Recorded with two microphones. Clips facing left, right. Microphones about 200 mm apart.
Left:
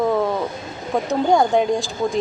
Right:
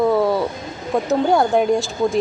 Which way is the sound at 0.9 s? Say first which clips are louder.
Right 1 dB; centre (ahead or behind).